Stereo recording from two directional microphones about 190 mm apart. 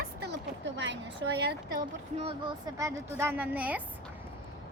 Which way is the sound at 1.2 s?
60° right (ahead or behind).